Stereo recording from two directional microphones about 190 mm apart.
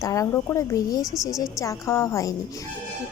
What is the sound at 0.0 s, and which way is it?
Speech, 15° left (ahead or behind).